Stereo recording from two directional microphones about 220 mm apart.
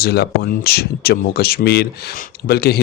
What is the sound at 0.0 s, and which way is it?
Speech, 45° left (ahead or behind).